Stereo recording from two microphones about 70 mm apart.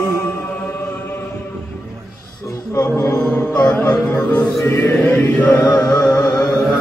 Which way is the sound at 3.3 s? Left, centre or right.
Centre.